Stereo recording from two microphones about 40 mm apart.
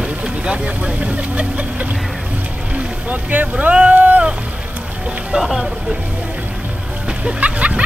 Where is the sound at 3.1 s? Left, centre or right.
Right.